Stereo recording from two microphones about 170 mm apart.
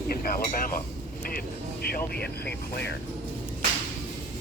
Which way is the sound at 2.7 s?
85° left.